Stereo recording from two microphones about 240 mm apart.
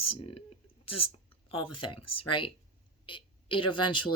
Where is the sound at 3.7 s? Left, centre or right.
Centre.